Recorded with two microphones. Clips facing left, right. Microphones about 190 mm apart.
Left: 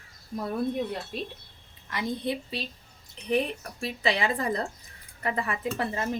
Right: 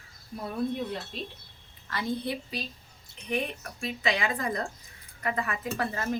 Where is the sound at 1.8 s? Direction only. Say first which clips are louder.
Left 1 dB; 20° left (ahead or behind).